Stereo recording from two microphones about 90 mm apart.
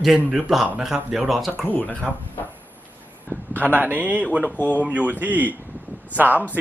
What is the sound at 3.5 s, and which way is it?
Speech, 20° right (ahead or behind).